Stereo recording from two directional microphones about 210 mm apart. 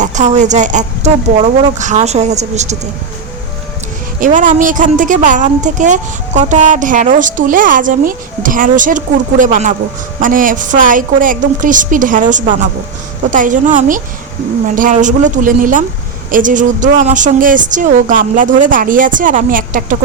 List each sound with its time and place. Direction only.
0.0 s speech: 35° right (ahead or behind)
4.2 s speech: 35° right (ahead or behind)
13.3 s speech: 40° right (ahead or behind)